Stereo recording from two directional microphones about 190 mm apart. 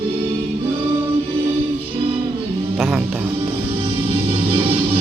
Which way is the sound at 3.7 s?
30° right (ahead or behind).